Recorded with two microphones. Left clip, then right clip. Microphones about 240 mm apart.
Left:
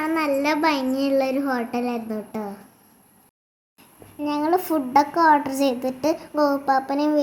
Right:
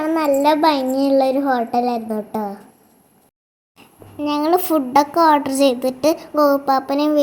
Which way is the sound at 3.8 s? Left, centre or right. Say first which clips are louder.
Right 5 dB; centre.